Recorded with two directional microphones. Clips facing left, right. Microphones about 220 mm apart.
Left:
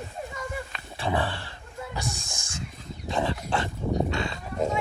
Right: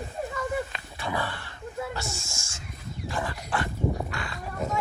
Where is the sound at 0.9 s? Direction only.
30° left (ahead or behind).